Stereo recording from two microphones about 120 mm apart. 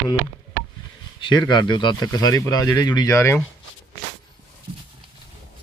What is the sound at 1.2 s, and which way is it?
Speech, 40° left (ahead or behind).